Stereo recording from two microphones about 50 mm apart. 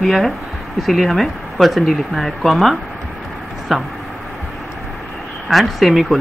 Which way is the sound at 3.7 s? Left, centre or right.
Centre.